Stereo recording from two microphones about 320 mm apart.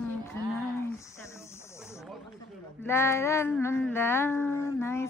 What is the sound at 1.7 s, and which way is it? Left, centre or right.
Snake, centre.